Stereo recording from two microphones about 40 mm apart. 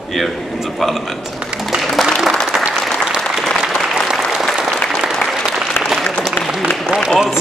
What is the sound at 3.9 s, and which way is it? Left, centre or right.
Applause, centre.